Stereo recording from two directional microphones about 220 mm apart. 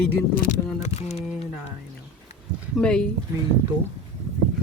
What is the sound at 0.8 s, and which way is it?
Speech, 30° left (ahead or behind).